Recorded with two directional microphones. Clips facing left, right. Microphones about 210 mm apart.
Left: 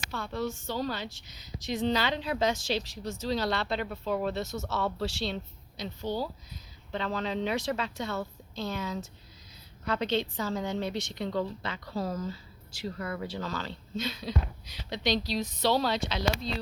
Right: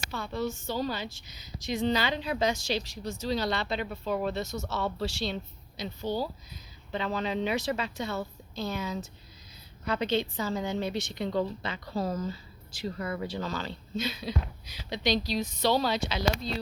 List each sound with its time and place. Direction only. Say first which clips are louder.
0.1 s a woman's voice: right 1 dB; centre (ahead or behind)